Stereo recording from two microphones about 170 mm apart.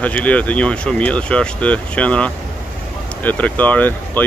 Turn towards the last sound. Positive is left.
turn(degrees=10)  # may be behind; listen again after turning